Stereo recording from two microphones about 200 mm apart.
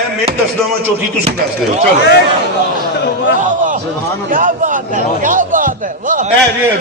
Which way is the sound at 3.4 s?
40° right (ahead or behind).